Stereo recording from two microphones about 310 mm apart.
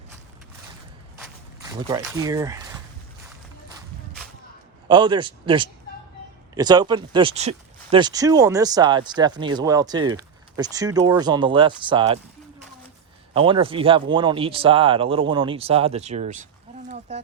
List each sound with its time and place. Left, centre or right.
2.1 s speech: centre
4.9 s speech: centre
13.3 s speech: centre
17.1 s a sound: right